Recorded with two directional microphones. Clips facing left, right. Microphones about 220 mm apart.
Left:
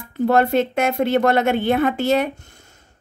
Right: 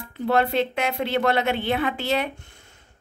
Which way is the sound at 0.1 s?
45° left (ahead or behind).